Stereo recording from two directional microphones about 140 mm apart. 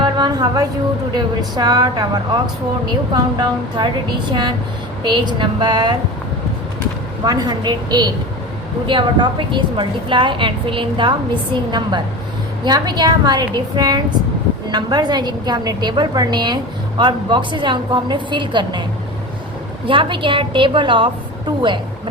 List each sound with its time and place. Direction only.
0.0 s a sound: 30° right (ahead or behind)
1.1 s a woman's voice: 30° right (ahead or behind)
7.3 s a woman's voice: 30° right (ahead or behind)